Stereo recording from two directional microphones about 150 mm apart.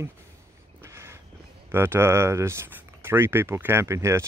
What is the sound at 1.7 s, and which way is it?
Speech, 15° right (ahead or behind).